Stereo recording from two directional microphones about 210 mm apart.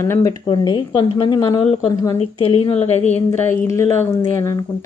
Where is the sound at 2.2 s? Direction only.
30° left (ahead or behind).